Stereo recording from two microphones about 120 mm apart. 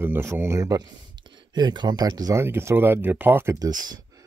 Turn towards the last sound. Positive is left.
turn(degrees=-20)  # may be behind; listen again after turning